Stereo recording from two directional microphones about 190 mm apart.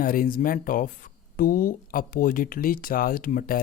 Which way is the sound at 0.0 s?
50° left (ahead or behind).